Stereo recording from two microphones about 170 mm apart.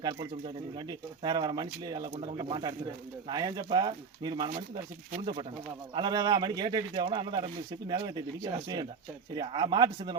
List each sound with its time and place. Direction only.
0.0 s speech: 25° right (ahead or behind)